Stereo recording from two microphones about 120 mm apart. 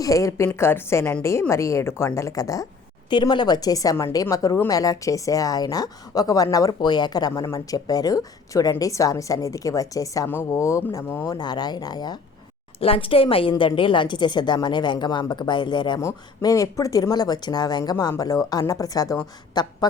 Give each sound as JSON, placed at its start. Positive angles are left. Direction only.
{"t": 0.0, "sound": "a woman's voice", "side_deg": 25}
{"t": 11.3, "sound": "a woman's voice", "side_deg": 35}
{"t": 12.8, "sound": "a woman's voice", "side_deg": 50}
{"t": 16.0, "sound": "a woman's voice", "side_deg": 25}